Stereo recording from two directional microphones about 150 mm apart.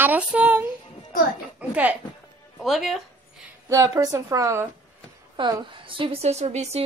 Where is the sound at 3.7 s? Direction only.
25° right (ahead or behind).